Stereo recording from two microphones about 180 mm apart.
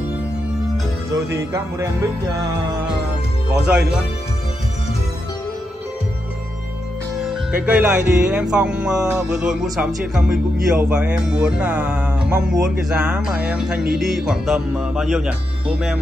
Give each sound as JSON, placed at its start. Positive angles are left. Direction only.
{"t": 1.3, "sound": "speech", "side_deg": -15}
{"t": 3.6, "sound": "music", "side_deg": -5}
{"t": 7.5, "sound": "music", "side_deg": -5}